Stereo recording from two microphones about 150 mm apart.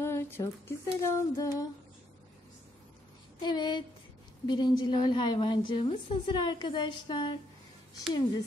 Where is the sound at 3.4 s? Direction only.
30° left (ahead or behind).